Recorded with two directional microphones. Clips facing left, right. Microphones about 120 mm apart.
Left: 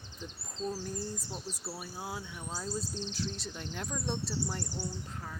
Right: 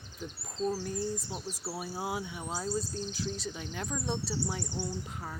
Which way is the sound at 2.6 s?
5° right (ahead or behind).